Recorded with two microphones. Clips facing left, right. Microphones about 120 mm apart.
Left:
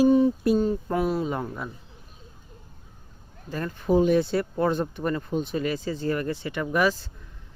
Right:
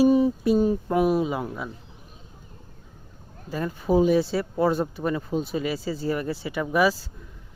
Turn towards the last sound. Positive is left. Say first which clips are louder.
# right 2 dB
turn(degrees=-10)  # may be behind; listen again after turning